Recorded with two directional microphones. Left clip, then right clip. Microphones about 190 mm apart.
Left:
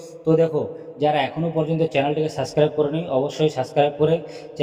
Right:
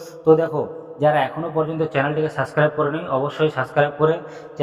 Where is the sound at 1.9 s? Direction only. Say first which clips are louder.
Even; 20° left (ahead or behind).